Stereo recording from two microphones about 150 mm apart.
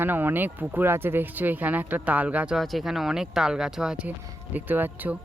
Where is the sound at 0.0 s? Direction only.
15° right (ahead or behind).